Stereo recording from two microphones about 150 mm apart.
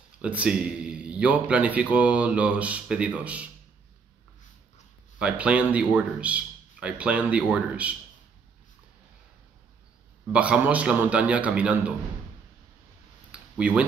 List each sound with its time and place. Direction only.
0.2 s speech: 10° right (ahead or behind)
5.2 s speech: 10° right (ahead or behind)
10.2 s speech: 5° right (ahead or behind)
13.3 s a sound: 10° right (ahead or behind)